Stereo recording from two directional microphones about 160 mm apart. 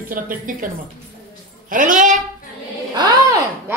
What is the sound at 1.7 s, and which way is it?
Speech, 55° right (ahead or behind).